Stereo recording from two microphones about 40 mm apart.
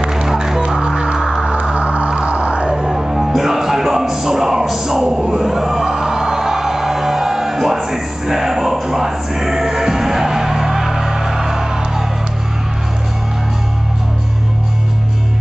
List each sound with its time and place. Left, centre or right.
0.1 s music: centre
1.5 s music: right
2.9 s music: centre